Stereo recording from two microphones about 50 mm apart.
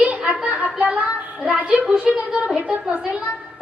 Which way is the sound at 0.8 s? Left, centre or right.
Right.